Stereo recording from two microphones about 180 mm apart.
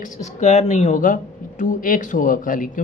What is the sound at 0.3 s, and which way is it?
Speech, 40° left (ahead or behind).